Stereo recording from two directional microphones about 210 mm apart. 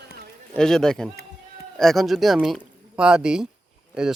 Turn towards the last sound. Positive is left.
turn(degrees=0)  # may be behind; listen again after turning